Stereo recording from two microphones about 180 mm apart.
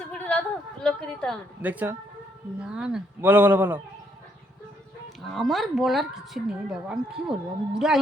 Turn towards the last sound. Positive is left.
turn(degrees=-5)  # may be behind; listen again after turning